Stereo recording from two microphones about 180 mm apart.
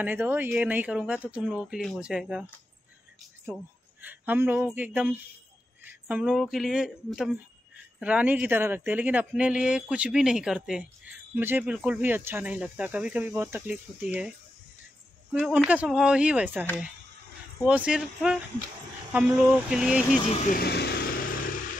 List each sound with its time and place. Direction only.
0.0 s speech: 10° right (ahead or behind)
4.0 s speech: 10° right (ahead or behind)
15.3 s speech: 5° right (ahead or behind)
17.6 s speech: 5° right (ahead or behind)
20.5 s vehicle: 65° left (ahead or behind)